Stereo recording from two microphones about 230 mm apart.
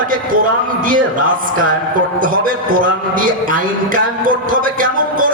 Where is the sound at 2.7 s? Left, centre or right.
Right.